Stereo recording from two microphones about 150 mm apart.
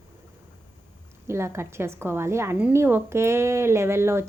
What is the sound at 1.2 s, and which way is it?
Speech, 20° right (ahead or behind).